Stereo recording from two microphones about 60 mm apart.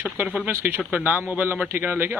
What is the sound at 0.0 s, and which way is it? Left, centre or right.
Speech, right.